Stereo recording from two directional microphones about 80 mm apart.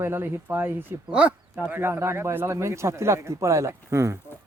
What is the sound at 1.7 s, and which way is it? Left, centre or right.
A man's voice, right.